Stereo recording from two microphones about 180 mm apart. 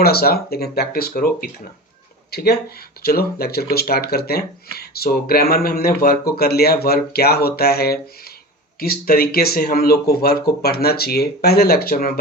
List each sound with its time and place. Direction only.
0.0 s speech: 60° left (ahead or behind)